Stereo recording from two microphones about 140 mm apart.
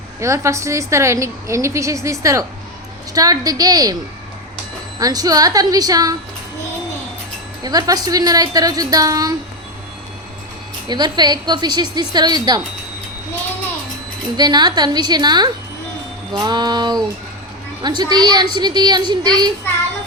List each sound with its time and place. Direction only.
0.2 s a woman's voice: 20° right (ahead or behind)
4.9 s a woman's voice: 25° right (ahead or behind)
7.6 s a woman's voice: 25° right (ahead or behind)
10.8 s a woman's voice: 30° right (ahead or behind)
14.3 s a woman's voice: 30° right (ahead or behind)